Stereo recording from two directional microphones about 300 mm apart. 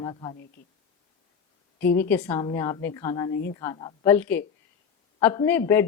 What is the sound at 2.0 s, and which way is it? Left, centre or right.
A woman's voice, centre.